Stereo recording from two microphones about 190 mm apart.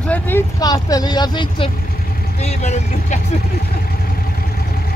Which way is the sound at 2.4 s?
35° left (ahead or behind).